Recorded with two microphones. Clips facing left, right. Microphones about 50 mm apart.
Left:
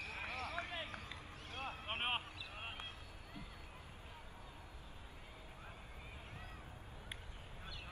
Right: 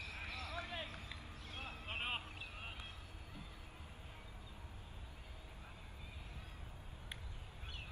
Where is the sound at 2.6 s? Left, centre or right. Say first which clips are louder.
Left 6 dB; left.